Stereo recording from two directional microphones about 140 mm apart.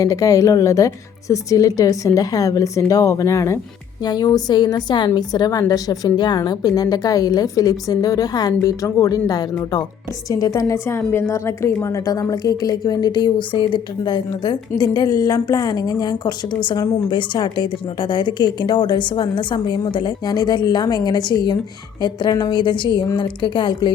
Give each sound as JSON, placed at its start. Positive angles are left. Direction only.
{"t": 0.0, "sound": "a woman's voice", "side_deg": 25}